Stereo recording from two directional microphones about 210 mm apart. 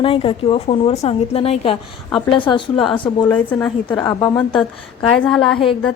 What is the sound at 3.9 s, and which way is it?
Speech, 20° left (ahead or behind).